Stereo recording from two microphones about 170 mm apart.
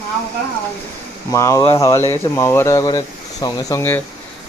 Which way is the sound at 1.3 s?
20° left (ahead or behind).